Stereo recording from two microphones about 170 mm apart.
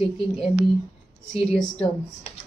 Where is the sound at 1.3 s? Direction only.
Centre (ahead or behind).